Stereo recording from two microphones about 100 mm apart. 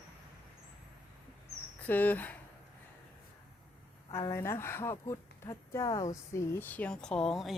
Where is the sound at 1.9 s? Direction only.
15° left (ahead or behind).